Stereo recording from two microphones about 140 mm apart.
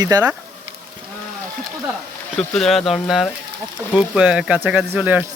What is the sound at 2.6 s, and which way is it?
Speech, centre (ahead or behind).